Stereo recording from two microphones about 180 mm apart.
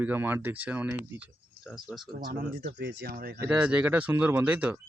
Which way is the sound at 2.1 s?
55° right (ahead or behind).